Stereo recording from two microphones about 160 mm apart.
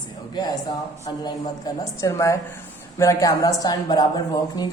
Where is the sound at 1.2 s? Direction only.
20° left (ahead or behind).